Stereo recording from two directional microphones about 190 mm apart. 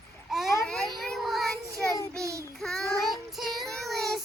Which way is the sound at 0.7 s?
5° left (ahead or behind).